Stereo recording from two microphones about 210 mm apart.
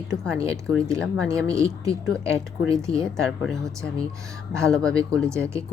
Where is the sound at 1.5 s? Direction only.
15° right (ahead or behind).